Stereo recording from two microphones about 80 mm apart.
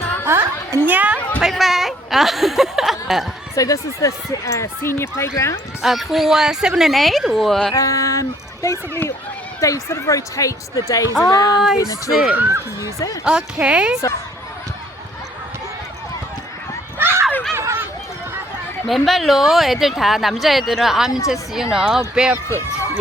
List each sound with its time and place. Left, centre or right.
0.3 s music: right
0.9 s a sound: centre
1.4 s speech: centre
3.5 s speech: left
5.8 s speech: centre
7.8 s speech: left
11.8 s speech: left
12.3 s speech: right
12.8 s speech: left
13.2 s speech: centre
17.0 s a sound: right
17.5 s run: right
18.9 s speech: centre